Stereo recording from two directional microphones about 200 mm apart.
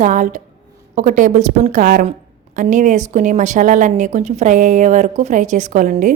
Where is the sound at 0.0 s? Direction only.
40° right (ahead or behind).